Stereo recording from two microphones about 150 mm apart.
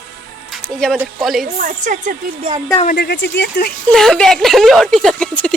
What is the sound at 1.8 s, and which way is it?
Speech, 55° right (ahead or behind).